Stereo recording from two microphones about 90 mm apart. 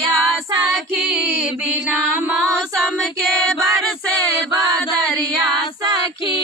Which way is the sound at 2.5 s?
Centre (ahead or behind).